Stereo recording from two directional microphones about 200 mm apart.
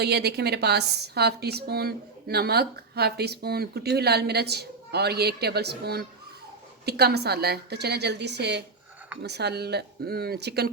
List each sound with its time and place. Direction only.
0.0 s a woman's voice: 55° right (ahead or behind)